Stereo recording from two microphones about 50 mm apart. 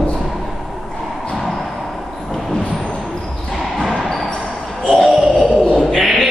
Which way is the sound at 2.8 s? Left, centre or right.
Centre.